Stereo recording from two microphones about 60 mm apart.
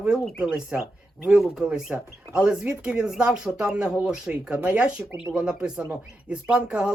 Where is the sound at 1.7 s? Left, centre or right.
Centre.